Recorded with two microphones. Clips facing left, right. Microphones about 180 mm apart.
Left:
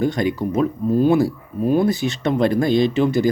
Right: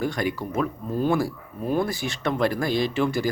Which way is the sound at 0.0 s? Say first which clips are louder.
Left 6 dB; 20° left (ahead or behind).